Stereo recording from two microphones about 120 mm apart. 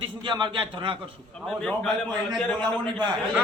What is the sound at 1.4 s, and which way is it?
Speech, 5° left (ahead or behind).